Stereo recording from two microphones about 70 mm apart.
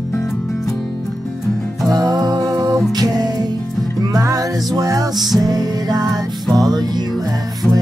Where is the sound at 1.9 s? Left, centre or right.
Right.